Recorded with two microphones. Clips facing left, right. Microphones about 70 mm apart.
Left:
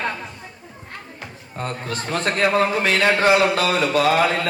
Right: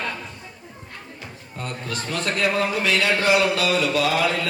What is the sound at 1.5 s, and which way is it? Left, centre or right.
A man's voice, left.